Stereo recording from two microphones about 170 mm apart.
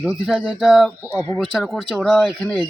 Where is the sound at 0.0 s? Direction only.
5° right (ahead or behind).